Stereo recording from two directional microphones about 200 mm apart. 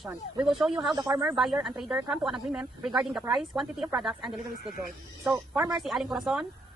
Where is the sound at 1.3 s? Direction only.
Centre (ahead or behind).